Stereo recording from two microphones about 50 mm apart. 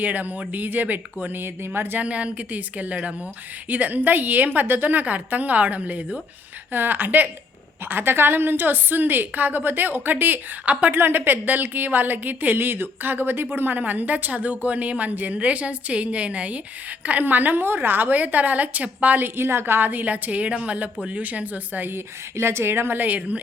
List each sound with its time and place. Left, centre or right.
0.0 s speech: right
1.7 s speech: right
2.0 s a woman's voice: right
6.7 s speech: right
10.9 s speech: right
19.2 s speech: right
21.8 s speech: right